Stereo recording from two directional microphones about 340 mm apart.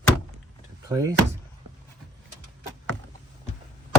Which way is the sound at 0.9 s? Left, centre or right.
Centre.